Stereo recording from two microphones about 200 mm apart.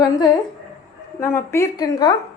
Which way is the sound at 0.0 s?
20° left (ahead or behind).